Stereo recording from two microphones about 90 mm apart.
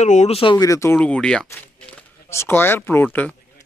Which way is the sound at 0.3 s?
90° left.